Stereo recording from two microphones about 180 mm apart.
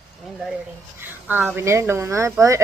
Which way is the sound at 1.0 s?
10° right (ahead or behind).